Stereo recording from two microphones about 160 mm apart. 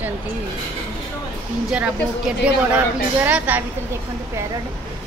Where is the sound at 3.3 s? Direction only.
10° right (ahead or behind).